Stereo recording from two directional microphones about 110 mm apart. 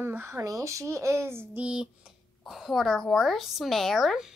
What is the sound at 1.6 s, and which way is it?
A woman's voice, 10° right (ahead or behind).